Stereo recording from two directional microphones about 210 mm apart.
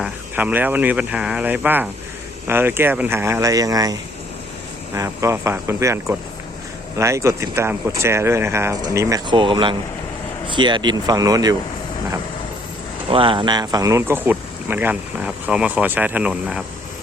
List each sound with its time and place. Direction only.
0.0 s speech: 5° right (ahead or behind)
4.9 s speech: 15° right (ahead or behind)
13.1 s speech: 25° right (ahead or behind); by 16.6 s 5° right (ahead or behind)